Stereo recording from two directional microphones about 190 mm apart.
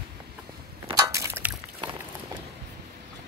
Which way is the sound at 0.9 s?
15° right (ahead or behind).